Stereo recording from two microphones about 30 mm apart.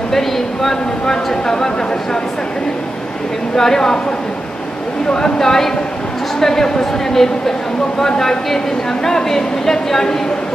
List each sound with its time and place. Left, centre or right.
0.1 s speech: centre
3.5 s speech: centre
5.1 s speech: centre